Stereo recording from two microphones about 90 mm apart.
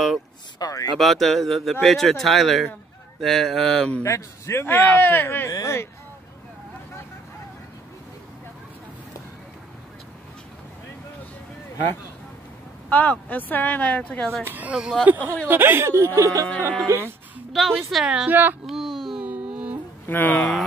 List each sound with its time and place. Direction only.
0.6 s speech: 40° left (ahead or behind)
0.9 s speech: centre (ahead or behind)
4.0 s a man's voice: 30° left (ahead or behind)
5.5 s speech: 35° left (ahead or behind)
12.9 s a man's voice: 20° left (ahead or behind)
14.4 s speech: 20° right (ahead or behind)
17.5 s speech: centre (ahead or behind)
18.3 s speech: 20° right (ahead or behind)
18.7 s a sound: centre (ahead or behind)
19.2 s music: 15° right (ahead or behind)
20.1 s speech: 20° left (ahead or behind)